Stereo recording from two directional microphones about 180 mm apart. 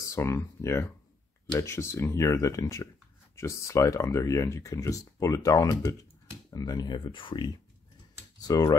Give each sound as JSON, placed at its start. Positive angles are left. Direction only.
{"t": 0.0, "sound": "speech", "side_deg": 15}